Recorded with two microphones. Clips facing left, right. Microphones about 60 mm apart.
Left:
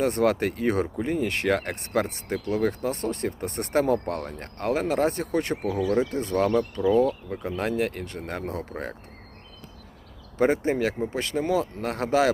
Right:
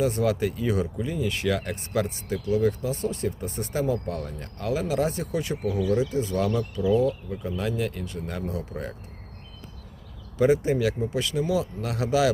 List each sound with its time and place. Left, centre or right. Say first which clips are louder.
0.0 s speech: left 1 dB; left
10.3 s speech: right 1 dB; left